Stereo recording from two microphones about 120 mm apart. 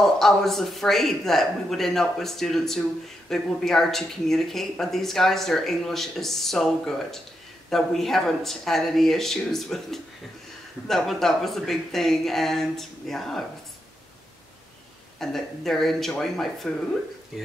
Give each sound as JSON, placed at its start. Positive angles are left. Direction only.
{"t": 0.0, "sound": "speech", "side_deg": 5}
{"t": 15.1, "sound": "speech", "side_deg": 5}